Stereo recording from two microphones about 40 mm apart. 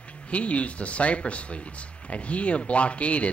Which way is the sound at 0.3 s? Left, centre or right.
Left.